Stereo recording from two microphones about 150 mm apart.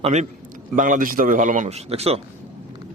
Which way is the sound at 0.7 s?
60° right (ahead or behind).